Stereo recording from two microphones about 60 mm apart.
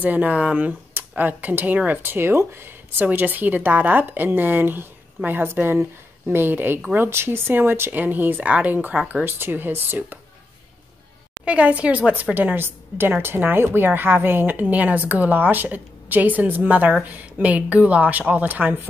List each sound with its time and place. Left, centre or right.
0.0 s a woman's voice: right
3.0 s a woman's voice: right
11.4 s a woman's voice: right
12.6 s a woman's voice: right